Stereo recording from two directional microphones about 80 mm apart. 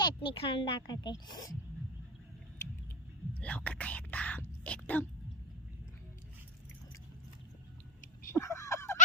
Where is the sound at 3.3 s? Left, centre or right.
Centre.